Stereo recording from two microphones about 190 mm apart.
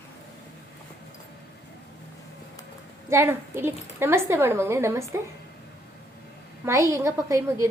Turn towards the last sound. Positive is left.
turn(degrees=-15)  # may be behind; listen again after turning